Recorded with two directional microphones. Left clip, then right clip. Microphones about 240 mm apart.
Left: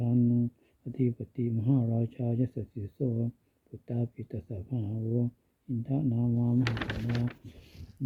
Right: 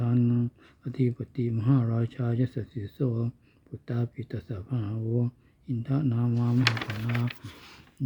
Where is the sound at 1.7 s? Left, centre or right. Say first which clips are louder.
Right 2 dB; right.